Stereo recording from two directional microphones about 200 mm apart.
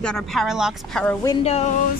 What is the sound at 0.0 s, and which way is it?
Speech, centre (ahead or behind).